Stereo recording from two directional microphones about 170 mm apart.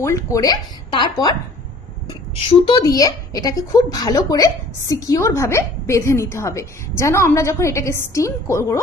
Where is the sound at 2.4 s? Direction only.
30° left (ahead or behind).